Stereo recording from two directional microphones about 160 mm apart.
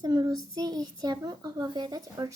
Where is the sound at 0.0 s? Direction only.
25° right (ahead or behind).